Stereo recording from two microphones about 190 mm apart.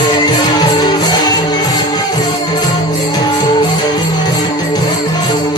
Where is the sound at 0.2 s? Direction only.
20° left (ahead or behind).